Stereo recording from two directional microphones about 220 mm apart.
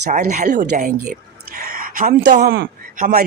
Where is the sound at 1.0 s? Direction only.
40° right (ahead or behind).